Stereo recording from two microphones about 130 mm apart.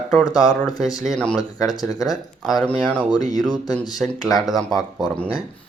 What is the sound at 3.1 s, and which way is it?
Speech, 30° left (ahead or behind).